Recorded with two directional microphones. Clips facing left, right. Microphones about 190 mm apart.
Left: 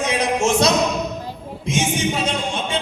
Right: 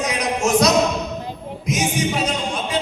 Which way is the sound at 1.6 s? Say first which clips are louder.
Even; 25° left (ahead or behind).